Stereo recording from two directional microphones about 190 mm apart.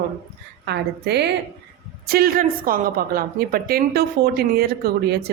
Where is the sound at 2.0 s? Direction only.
50° right (ahead or behind).